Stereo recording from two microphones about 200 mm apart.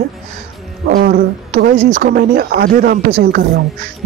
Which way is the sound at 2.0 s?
50° right (ahead or behind).